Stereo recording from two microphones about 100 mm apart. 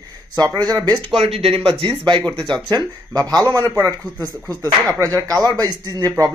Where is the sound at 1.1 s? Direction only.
75° right (ahead or behind).